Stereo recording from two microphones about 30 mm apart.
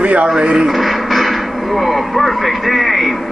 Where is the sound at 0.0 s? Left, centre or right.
Right.